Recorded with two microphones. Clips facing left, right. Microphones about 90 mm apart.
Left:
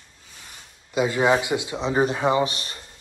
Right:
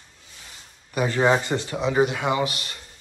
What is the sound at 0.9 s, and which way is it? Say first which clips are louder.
Speech: even; 15° left (ahead or behind).